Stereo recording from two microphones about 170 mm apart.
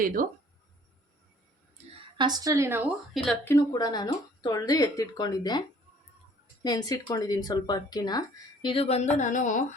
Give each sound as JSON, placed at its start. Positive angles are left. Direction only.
{"t": 0.0, "sound": "speech", "side_deg": -55}
{"t": 2.1, "sound": "a woman's voice", "side_deg": -25}
{"t": 3.2, "sound": "a woman's voice", "side_deg": 10}
{"t": 3.7, "sound": "speech", "side_deg": 25}
{"t": 8.6, "sound": "speech", "side_deg": 35}